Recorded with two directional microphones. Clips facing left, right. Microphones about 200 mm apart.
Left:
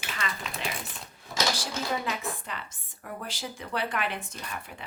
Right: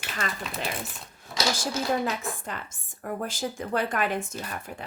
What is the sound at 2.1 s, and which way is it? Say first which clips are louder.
Speech: right 2 dB; 45° right (ahead or behind).